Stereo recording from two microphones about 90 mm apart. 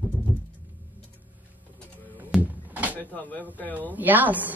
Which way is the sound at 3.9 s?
20° right (ahead or behind).